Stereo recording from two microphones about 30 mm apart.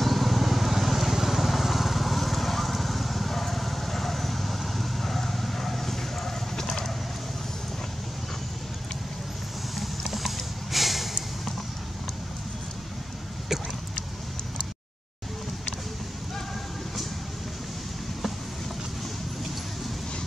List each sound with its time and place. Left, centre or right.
0.0 s vehicle: centre
10.1 s snort: centre